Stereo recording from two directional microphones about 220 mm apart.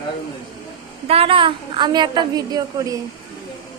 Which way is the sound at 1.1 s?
25° right (ahead or behind).